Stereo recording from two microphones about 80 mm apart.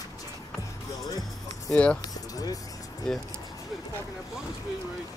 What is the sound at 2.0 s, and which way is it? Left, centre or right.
Music, left.